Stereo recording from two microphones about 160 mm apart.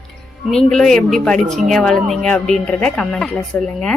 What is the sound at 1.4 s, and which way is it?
Speech, 45° right (ahead or behind).